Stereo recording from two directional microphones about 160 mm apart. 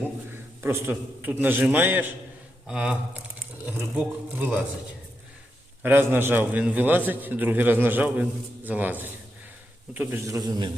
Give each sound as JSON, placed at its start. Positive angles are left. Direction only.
{"t": 0.6, "sound": "a man's voice", "side_deg": -15}
{"t": 5.8, "sound": "a man's voice", "side_deg": -10}